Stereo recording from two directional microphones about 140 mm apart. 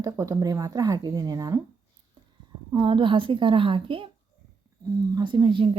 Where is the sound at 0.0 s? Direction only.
25° right (ahead or behind).